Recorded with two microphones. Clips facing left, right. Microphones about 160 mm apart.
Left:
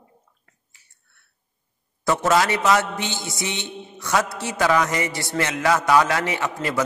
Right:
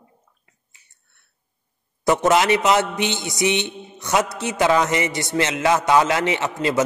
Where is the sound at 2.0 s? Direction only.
20° right (ahead or behind).